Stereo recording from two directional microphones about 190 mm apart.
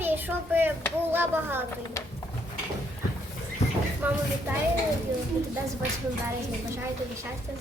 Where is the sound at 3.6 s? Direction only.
35° left (ahead or behind).